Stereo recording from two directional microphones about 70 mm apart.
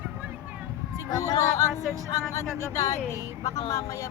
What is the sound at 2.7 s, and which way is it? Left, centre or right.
Speech, left.